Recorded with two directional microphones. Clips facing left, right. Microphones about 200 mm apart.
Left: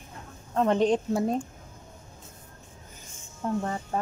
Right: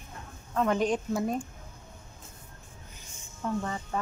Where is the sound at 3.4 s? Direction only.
40° left (ahead or behind).